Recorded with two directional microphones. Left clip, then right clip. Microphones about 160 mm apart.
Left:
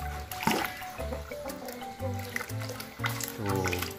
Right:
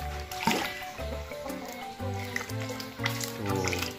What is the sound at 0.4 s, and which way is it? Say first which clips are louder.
Music: even; 5° left (ahead or behind).